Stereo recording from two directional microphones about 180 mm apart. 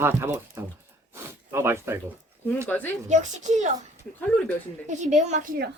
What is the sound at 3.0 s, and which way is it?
Speech, 40° right (ahead or behind).